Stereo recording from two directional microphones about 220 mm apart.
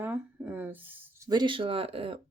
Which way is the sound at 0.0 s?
10° right (ahead or behind).